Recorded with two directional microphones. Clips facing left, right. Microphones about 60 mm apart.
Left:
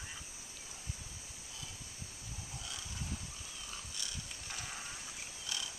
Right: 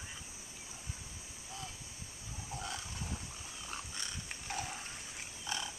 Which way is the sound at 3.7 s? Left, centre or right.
Right.